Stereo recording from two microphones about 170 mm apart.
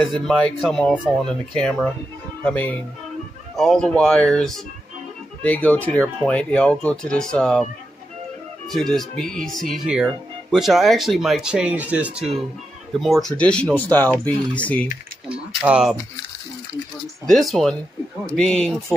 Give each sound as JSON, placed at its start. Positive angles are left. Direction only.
{"t": 0.0, "sound": "speech", "side_deg": 5}
{"t": 8.6, "sound": "speech", "side_deg": 0}
{"t": 15.2, "sound": "speech", "side_deg": -5}
{"t": 17.3, "sound": "speech", "side_deg": 0}